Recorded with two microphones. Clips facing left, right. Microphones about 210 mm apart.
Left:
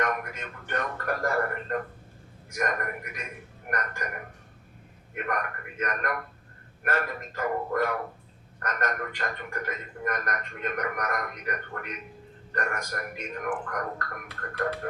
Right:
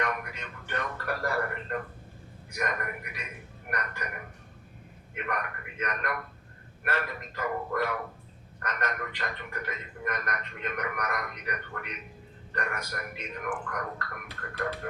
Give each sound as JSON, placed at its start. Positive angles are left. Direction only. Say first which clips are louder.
{"t": 0.0, "sound": "speech", "louder": "left 3 dB", "side_deg": 50}